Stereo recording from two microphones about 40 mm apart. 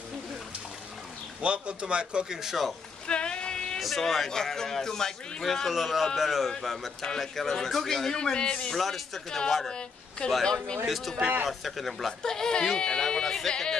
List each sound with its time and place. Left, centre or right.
1.4 s a man's voice: right
2.3 s speech: centre
3.1 s a sound: left
3.8 s speech: centre
4.3 s a man's voice: centre
5.7 s a man's voice: centre
8.1 s speech: centre
8.7 s speech: centre
9.7 s a woman's voice: left
10.9 s speech: centre
12.1 s a man's voice: centre